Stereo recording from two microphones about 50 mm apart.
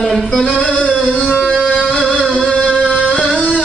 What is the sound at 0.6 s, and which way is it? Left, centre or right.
Music, left.